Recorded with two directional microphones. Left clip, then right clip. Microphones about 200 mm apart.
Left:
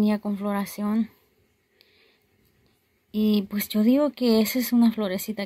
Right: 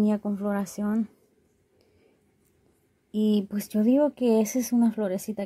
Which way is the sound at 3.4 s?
5° right (ahead or behind).